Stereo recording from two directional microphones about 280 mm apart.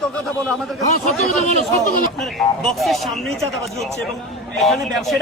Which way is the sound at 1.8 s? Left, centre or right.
Left.